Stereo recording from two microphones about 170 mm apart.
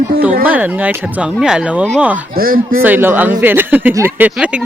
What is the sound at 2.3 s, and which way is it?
Speech, 60° right (ahead or behind).